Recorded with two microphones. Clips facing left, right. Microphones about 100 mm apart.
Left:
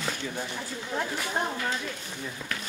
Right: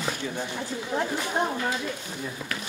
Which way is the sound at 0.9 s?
15° right (ahead or behind).